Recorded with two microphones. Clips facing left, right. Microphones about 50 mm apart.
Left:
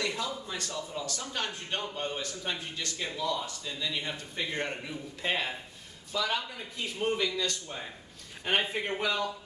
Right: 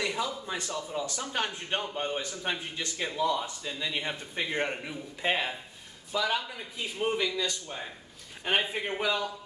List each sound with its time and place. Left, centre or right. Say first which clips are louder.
0.0 s a man's voice: right 2 dB; centre